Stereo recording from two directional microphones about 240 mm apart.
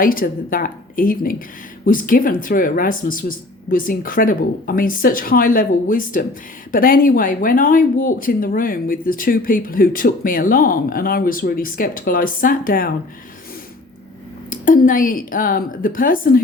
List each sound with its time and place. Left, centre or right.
0.0 s speech: left
14.5 s speech: left